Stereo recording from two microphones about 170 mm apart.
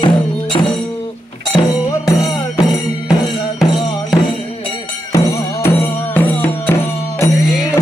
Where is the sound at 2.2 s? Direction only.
20° left (ahead or behind).